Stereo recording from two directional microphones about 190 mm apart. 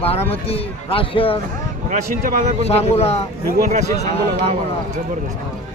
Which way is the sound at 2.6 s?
35° left (ahead or behind).